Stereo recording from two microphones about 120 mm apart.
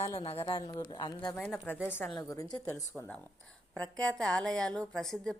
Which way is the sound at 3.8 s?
10° left (ahead or behind).